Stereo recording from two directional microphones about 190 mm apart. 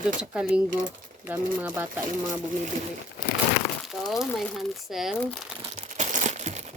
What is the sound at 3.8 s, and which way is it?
Speech, centre (ahead or behind).